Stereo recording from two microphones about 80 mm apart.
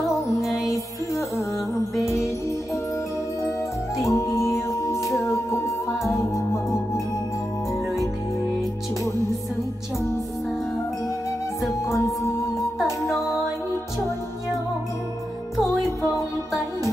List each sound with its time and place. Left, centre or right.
4.0 s music: left
16.1 s music: left